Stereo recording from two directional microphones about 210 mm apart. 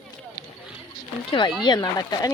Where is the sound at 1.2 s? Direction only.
20° left (ahead or behind).